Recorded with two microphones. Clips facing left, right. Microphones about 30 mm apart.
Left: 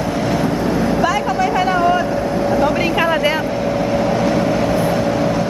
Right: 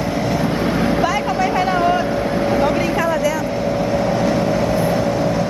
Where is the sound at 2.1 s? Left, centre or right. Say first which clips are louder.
Left 1 dB; right.